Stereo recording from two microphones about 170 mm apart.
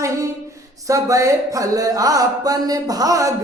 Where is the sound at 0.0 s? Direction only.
20° right (ahead or behind).